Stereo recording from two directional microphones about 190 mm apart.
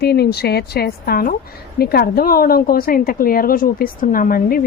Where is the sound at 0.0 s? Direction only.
55° left (ahead or behind).